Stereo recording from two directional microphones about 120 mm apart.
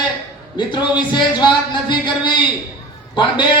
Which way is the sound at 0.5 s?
40° left (ahead or behind).